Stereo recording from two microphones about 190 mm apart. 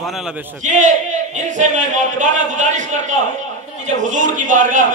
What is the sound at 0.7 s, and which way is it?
A man's voice, 40° right (ahead or behind).